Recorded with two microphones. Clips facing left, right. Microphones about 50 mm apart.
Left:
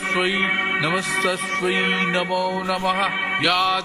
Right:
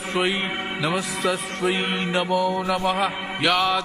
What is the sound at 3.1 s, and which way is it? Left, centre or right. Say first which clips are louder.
Music: left 7 dB; left.